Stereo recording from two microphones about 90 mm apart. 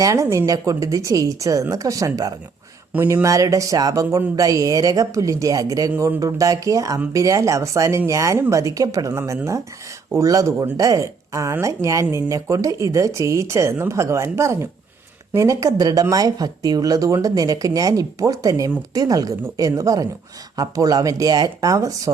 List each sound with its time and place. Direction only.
0.0 s speech: 35° right (ahead or behind)
2.9 s speech: 25° right (ahead or behind)